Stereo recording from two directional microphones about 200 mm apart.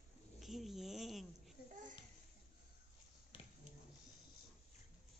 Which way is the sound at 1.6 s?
50° left (ahead or behind).